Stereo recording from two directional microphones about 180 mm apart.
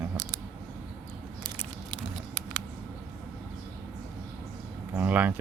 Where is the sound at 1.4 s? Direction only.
30° right (ahead or behind).